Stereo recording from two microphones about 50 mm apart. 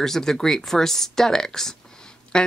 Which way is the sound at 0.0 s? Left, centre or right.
Centre.